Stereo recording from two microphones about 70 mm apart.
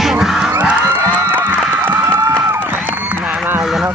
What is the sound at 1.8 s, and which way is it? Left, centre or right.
Cheering, right.